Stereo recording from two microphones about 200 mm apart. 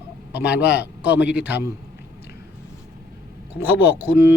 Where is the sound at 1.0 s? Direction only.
5° right (ahead or behind).